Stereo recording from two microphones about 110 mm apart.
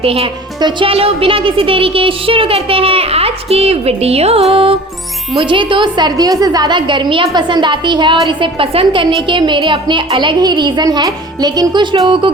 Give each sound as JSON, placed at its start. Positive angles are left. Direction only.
{"t": 0.0, "sound": "a woman's voice", "side_deg": -60}